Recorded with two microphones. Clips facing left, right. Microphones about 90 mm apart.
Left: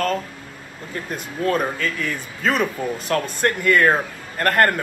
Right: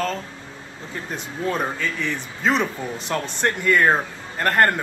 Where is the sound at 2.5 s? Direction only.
5° left (ahead or behind).